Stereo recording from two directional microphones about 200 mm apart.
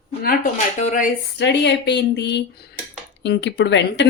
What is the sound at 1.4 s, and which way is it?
Speech, 60° left (ahead or behind).